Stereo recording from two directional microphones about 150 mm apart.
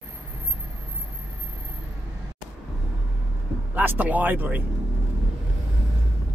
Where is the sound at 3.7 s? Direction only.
15° right (ahead or behind).